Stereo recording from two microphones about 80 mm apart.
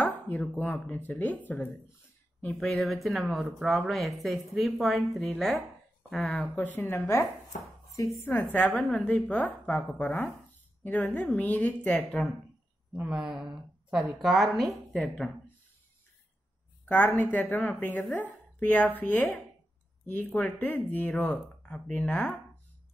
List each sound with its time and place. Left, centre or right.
0.0 s speech: centre
2.6 s a woman's voice: centre
6.4 s a woman's voice: left
8.4 s speech: centre
8.6 s a woman's voice: centre
9.0 s speech: centre
13.0 s a woman's voice: centre
16.8 s speech: left